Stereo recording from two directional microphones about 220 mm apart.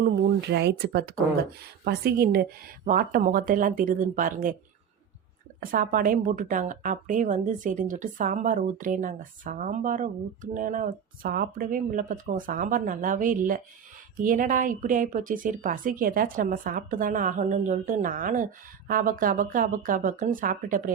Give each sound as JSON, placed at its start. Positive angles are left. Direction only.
{"t": 0.0, "sound": "a woman's voice", "side_deg": -50}
{"t": 5.5, "sound": "a woman's voice", "side_deg": -40}